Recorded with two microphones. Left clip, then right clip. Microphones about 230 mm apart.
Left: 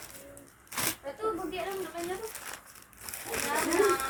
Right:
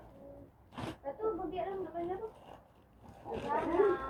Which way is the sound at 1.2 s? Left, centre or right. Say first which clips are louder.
Left 3 dB; left.